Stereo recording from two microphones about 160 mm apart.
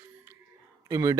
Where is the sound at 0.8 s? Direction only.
20° right (ahead or behind).